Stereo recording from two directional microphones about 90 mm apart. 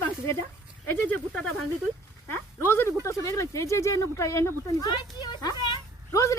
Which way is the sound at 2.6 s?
25° left (ahead or behind).